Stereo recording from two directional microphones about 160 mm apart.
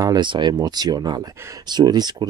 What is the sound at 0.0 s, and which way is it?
Speech, 25° right (ahead or behind).